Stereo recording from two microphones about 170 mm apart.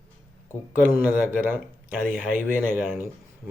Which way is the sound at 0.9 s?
10° right (ahead or behind).